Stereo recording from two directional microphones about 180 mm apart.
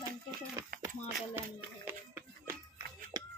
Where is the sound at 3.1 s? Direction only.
20° right (ahead or behind).